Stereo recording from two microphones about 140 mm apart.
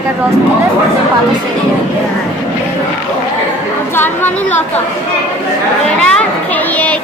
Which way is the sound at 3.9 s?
15° left (ahead or behind).